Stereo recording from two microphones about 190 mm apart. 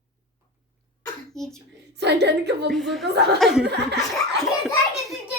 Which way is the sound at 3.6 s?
60° right (ahead or behind).